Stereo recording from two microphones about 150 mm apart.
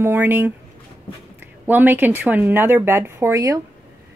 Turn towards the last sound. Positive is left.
turn(degrees=-20)  # may be behind; listen again after turning